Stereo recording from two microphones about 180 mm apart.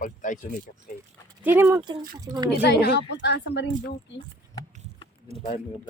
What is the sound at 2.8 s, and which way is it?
Speech, 70° left (ahead or behind).